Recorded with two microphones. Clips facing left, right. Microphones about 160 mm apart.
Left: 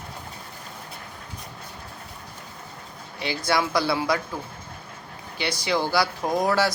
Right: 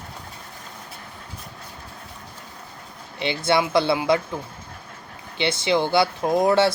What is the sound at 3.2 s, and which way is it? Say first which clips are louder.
Speech: right 3 dB; 25° right (ahead or behind).